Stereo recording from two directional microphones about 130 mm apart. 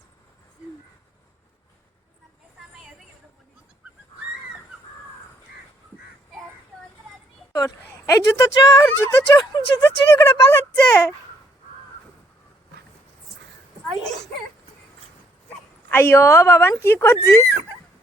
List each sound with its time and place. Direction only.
7.5 s speech: 25° left (ahead or behind)
9.4 s speech: 35° left (ahead or behind)
10.2 s speech: 25° left (ahead or behind)
15.9 s speech: 15° left (ahead or behind)